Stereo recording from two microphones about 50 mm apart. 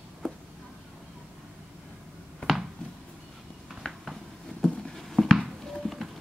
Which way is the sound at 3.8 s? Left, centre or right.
Centre.